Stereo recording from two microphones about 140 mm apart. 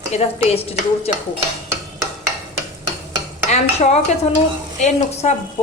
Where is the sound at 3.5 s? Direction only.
55° left (ahead or behind).